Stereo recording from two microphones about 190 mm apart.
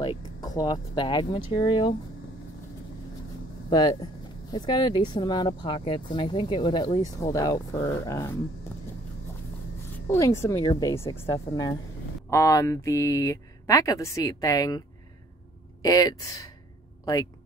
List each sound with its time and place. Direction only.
0.4 s speech: 20° left (ahead or behind)
3.7 s speech: 20° left (ahead or behind)
9.9 s speech: 15° left (ahead or behind)
15.8 s speech: 20° left (ahead or behind)